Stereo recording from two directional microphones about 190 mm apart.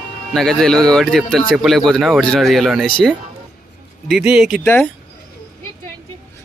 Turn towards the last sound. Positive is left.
turn(degrees=0)  # may be behind; listen again after turning